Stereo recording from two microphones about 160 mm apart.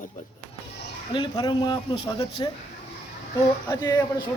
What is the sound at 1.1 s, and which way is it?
A man's voice, 30° left (ahead or behind).